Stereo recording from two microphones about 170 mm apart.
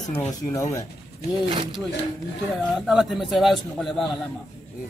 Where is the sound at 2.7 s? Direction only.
Centre (ahead or behind).